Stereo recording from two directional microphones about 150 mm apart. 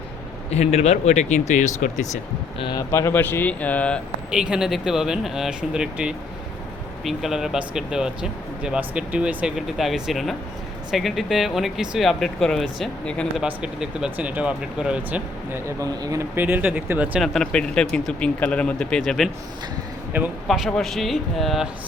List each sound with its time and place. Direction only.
0.5 s speech: 45° left (ahead or behind)
2.6 s speech: 30° left (ahead or behind)
2.9 s speech: 15° left (ahead or behind)
4.3 s speech: 5° right (ahead or behind)
17.2 s speech: centre (ahead or behind)
20.1 s speech: 10° right (ahead or behind)
20.5 s speech: 5° left (ahead or behind)